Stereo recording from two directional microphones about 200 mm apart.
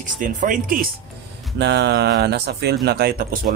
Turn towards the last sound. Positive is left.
turn(degrees=-50)  # may be behind; listen again after turning